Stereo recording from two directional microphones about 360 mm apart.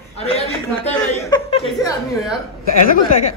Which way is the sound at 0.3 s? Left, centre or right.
Centre.